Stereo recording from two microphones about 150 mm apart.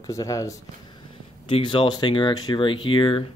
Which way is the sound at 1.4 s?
35° left (ahead or behind).